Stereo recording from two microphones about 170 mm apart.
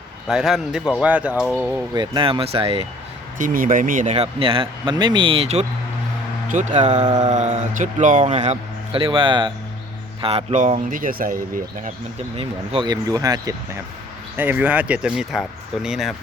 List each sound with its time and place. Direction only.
0.3 s speech: centre (ahead or behind)
2.0 s speech: 30° right (ahead or behind)
3.3 s a man's voice: 55° right (ahead or behind)
4.1 s speech: 35° right (ahead or behind)
6.5 s a man's voice: 50° right (ahead or behind)
12.4 s speech: 30° right (ahead or behind); by 16.1 s centre (ahead or behind)